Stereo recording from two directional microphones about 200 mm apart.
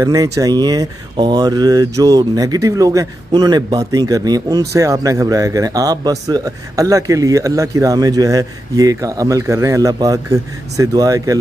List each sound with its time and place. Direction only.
0.0 s speech: 15° right (ahead or behind)